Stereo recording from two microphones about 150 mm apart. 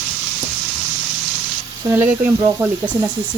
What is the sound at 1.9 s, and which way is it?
Speech, 15° right (ahead or behind).